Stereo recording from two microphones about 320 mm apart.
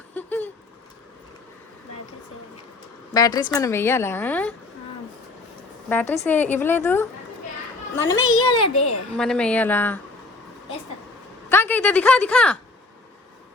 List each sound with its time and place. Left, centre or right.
0.1 s a sound: centre
3.1 s speech: centre
5.9 s speech: centre
8.2 s a child's voice: left
9.1 s speech: centre
11.4 s speech: centre